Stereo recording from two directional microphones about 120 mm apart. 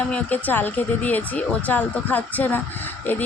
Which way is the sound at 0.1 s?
15° left (ahead or behind).